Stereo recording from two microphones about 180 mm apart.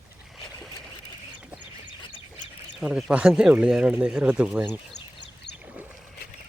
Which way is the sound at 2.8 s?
5° right (ahead or behind).